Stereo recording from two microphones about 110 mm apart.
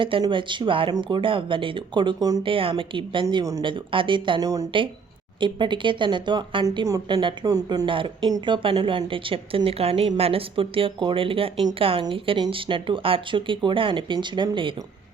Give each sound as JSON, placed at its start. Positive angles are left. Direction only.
{"t": 0.2, "sound": "a woman's voice", "side_deg": -50}
{"t": 2.4, "sound": "a woman's voice", "side_deg": -55}
{"t": 4.4, "sound": "speech", "side_deg": -30}
{"t": 5.4, "sound": "a woman's voice", "side_deg": -45}
{"t": 6.8, "sound": "speech", "side_deg": -30}
{"t": 7.9, "sound": "a woman's voice", "side_deg": -50}